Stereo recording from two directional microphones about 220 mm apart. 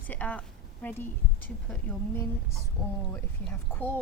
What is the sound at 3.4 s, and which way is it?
Speech, 10° left (ahead or behind).